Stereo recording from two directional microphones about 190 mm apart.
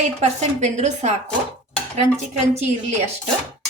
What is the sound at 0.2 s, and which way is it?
Speech, 35° right (ahead or behind).